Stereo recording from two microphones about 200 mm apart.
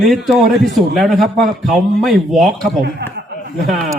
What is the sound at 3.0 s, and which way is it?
Speech, 55° right (ahead or behind).